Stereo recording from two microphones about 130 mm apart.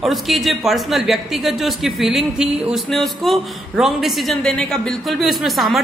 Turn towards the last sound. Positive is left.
turn(degrees=0)  # may be behind; listen again after turning